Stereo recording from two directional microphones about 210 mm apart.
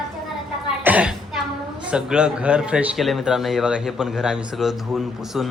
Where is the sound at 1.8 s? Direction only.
5° right (ahead or behind).